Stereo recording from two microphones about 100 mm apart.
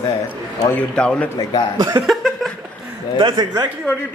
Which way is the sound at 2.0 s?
Centre (ahead or behind).